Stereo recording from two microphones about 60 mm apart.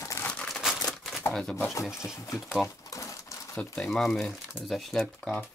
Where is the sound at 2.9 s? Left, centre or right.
Left.